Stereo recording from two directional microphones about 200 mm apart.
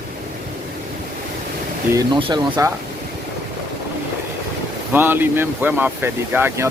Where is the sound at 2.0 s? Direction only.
25° right (ahead or behind).